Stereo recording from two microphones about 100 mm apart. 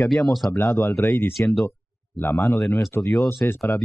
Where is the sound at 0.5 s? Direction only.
30° left (ahead or behind).